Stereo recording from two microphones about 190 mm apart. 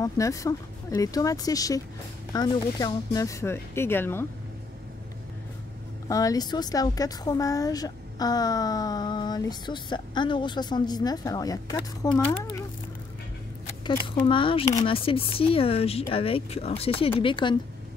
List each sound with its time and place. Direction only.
0.0 s speech: 15° left (ahead or behind)
6.0 s speech: 20° left (ahead or behind)
13.8 s speech: 25° left (ahead or behind)